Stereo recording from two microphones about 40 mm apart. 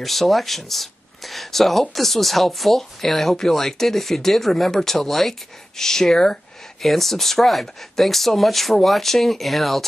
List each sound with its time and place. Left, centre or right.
0.0 s speech: centre